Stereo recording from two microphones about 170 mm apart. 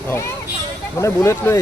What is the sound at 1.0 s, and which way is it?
Speech, 15° left (ahead or behind).